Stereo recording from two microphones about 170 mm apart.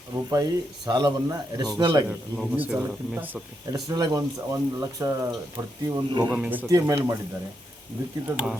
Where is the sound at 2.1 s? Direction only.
10° right (ahead or behind).